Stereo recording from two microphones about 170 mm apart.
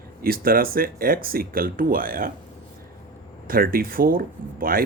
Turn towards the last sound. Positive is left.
turn(degrees=-60)  # may be behind; listen again after turning